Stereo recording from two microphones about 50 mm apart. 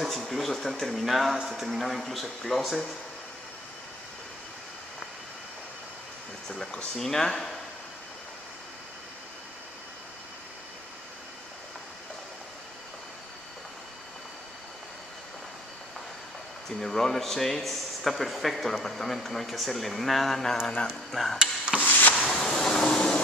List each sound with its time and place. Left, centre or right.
0.0 s speech: centre
6.5 s speech: centre
16.8 s speech: centre
21.7 s drawer open or close: left
22.3 s a sound: centre